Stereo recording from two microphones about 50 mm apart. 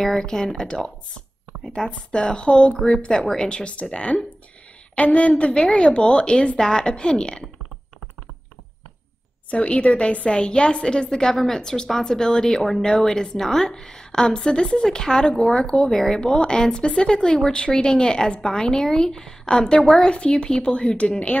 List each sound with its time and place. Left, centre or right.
0.0 s a woman's voice: centre
9.5 s a woman's voice: left
15.9 s a woman's voice: centre
20.1 s a woman's voice: centre